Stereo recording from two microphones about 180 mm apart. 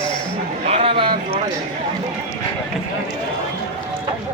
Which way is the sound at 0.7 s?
30° right (ahead or behind).